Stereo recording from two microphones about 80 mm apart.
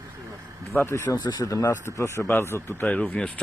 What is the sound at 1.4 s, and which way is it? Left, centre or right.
Speech, left.